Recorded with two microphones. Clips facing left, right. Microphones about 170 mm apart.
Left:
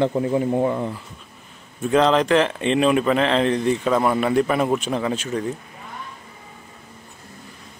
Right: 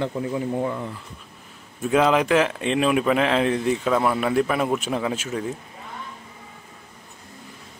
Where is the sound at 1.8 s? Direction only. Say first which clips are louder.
Left 2 dB; 5° right (ahead or behind).